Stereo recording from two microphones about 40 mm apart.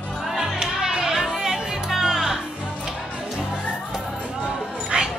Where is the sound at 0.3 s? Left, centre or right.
Centre.